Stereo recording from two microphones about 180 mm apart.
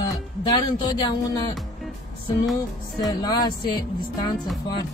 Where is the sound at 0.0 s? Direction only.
25° left (ahead or behind).